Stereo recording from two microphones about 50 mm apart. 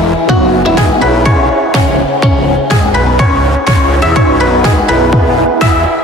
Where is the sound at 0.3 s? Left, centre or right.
Centre.